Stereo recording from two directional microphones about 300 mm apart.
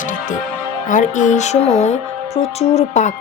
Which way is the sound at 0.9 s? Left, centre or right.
Left.